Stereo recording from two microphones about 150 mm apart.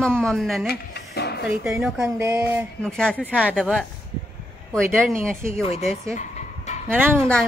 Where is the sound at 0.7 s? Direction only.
90° left.